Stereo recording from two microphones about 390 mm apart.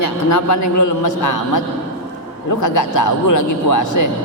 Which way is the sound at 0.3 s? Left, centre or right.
Left.